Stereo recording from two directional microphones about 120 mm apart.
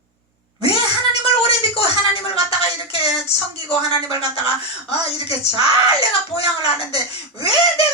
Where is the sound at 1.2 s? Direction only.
50° left (ahead or behind).